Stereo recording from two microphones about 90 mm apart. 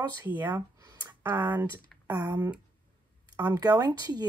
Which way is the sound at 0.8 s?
45° right (ahead or behind).